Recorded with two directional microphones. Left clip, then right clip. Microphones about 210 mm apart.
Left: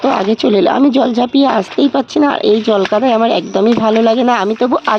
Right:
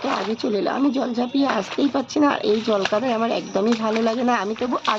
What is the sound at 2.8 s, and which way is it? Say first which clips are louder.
Speech: left 10 dB; 50° left (ahead or behind).